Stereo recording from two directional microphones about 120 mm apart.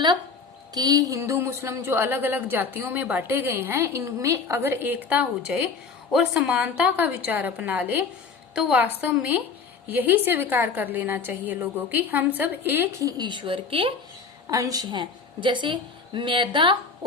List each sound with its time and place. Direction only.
0.7 s a woman's voice: 30° right (ahead or behind)
13.1 s speech: 35° right (ahead or behind)
14.4 s a woman's voice: 30° right (ahead or behind)